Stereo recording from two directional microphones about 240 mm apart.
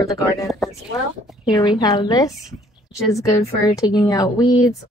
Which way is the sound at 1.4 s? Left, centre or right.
Centre.